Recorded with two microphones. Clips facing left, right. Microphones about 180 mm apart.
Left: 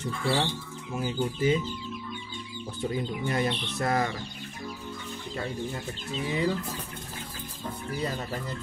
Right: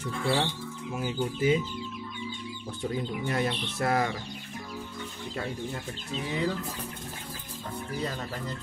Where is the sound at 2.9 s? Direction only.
Centre (ahead or behind).